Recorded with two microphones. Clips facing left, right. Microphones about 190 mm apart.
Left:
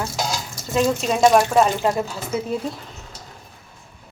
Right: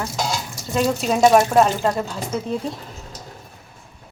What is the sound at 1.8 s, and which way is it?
Speech, 10° left (ahead or behind).